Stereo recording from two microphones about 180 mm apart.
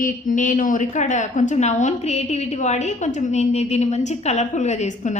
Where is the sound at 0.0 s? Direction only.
45° left (ahead or behind).